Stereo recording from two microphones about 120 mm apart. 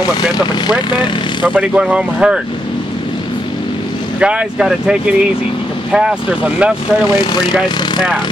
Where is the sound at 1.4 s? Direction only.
10° right (ahead or behind).